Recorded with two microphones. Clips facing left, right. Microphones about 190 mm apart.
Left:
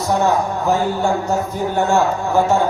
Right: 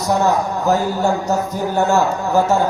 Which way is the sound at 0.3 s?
40° right (ahead or behind).